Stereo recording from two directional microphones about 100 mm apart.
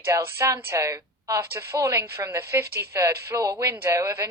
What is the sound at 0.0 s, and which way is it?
A woman's voice, 25° right (ahead or behind).